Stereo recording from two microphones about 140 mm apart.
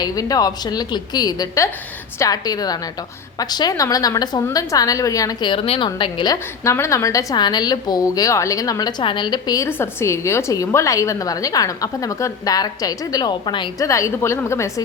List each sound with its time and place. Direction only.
0.0 s a woman's voice: 25° left (ahead or behind)
9.6 s a woman's voice: 15° left (ahead or behind); by 13.8 s 35° left (ahead or behind)
13.8 s a woman's voice: 20° left (ahead or behind)